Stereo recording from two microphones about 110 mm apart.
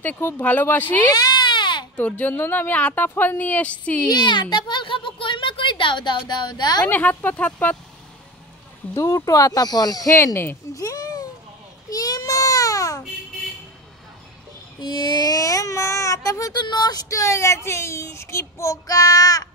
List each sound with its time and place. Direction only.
0.0 s speech: 20° left (ahead or behind)
1.0 s baby cry: 40° left (ahead or behind)
2.0 s speech: 15° left (ahead or behind)
4.1 s a child's voice: 45° left (ahead or behind)
6.9 s speech: 15° left (ahead or behind)
8.9 s speech: 30° left (ahead or behind)
10.1 s speech: 25° left (ahead or behind)
10.7 s a sound: 30° left (ahead or behind)
11.9 s baby cry: 35° left (ahead or behind)
14.8 s a sound: 45° left (ahead or behind)
16.6 s speech: 40° left (ahead or behind)